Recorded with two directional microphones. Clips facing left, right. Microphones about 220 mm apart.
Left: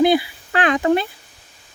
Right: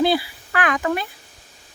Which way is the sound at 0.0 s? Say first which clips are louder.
Left 4 dB; 20° left (ahead or behind).